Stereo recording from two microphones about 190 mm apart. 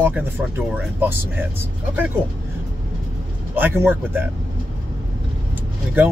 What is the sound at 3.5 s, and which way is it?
Speech, 10° right (ahead or behind).